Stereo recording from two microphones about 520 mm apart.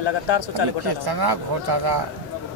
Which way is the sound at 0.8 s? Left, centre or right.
Right.